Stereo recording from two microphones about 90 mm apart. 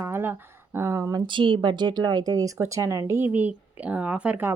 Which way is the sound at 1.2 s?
65° right (ahead or behind).